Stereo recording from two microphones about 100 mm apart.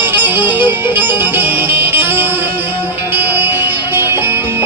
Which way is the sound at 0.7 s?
20° right (ahead or behind).